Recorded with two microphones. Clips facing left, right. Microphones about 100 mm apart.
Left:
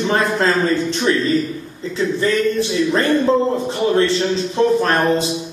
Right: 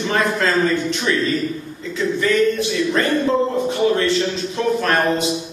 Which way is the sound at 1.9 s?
30° left (ahead or behind).